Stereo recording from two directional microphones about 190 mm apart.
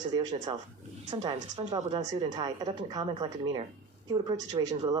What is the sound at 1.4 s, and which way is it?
A woman's voice, 35° right (ahead or behind).